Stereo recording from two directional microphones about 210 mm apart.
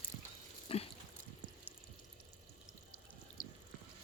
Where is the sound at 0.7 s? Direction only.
25° left (ahead or behind).